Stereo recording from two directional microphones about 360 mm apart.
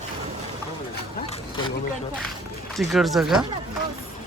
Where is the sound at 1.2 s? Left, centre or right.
Centre.